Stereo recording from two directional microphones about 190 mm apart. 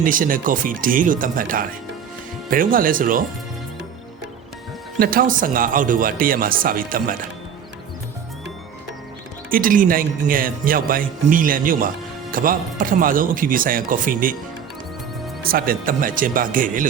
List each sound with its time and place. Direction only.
0.0 s a man's voice: 45° right (ahead or behind)
4.9 s a man's voice: 45° right (ahead or behind)
9.5 s a man's voice: 45° right (ahead or behind)
15.4 s a man's voice: 50° right (ahead or behind)